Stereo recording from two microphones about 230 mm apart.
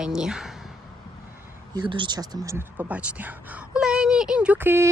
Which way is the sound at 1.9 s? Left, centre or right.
Centre.